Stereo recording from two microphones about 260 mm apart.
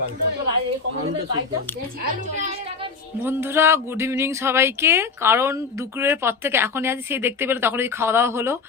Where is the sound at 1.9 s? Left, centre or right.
Right.